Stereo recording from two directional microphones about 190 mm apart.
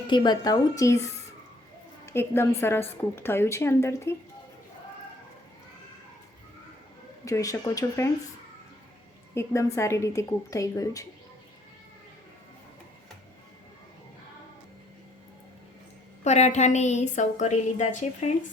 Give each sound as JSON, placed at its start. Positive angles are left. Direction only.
{"t": 0.1, "sound": "a woman's voice", "side_deg": 25}
{"t": 7.3, "sound": "speech", "side_deg": 15}
{"t": 9.3, "sound": "speech", "side_deg": 15}
{"t": 16.2, "sound": "a woman's voice", "side_deg": 35}